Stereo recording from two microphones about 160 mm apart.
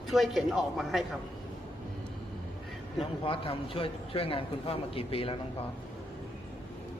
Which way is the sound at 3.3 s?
35° left (ahead or behind).